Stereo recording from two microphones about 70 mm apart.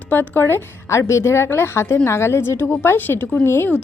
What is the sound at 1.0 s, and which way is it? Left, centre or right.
A woman's voice, left.